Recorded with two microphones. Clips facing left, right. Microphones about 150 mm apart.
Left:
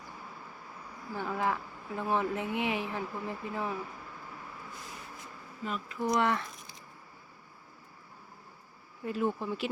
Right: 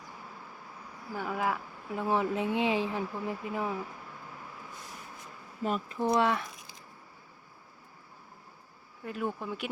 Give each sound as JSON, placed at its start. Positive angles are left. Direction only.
{"t": 1.1, "sound": "speech", "side_deg": -10}
{"t": 6.0, "sound": "speech", "side_deg": -20}
{"t": 9.0, "sound": "speech", "side_deg": 0}